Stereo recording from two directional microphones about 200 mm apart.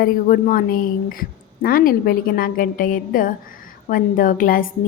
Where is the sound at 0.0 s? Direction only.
45° left (ahead or behind).